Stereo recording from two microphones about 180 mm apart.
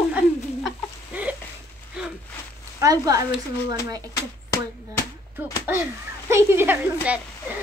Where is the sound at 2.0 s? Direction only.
5° right (ahead or behind).